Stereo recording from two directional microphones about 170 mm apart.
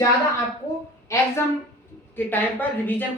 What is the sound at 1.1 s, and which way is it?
A woman's voice, 15° left (ahead or behind).